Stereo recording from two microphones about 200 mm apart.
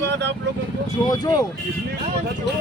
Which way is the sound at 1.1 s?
20° left (ahead or behind).